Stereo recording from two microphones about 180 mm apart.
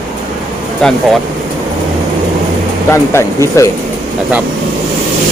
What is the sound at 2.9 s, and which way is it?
Speech, 15° left (ahead or behind).